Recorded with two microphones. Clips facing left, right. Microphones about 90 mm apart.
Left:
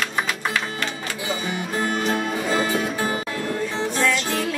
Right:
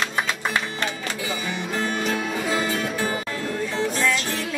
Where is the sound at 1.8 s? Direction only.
20° left (ahead or behind).